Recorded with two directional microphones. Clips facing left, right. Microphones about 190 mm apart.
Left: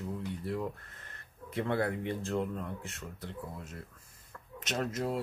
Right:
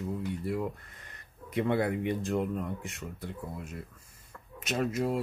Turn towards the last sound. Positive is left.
turn(degrees=-10)  # may be behind; listen again after turning